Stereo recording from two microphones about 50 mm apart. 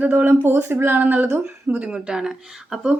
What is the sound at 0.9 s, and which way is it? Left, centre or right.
Speech, right.